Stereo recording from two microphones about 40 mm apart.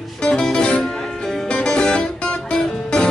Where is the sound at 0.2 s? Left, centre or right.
Centre.